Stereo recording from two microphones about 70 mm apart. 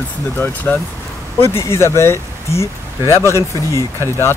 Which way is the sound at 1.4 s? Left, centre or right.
Left.